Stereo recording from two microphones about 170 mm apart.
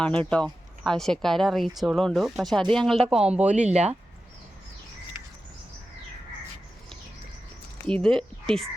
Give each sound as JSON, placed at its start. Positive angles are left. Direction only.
{"t": 0.0, "sound": "speech", "side_deg": 5}
{"t": 3.5, "sound": "speech", "side_deg": -45}
{"t": 7.9, "sound": "speech", "side_deg": 5}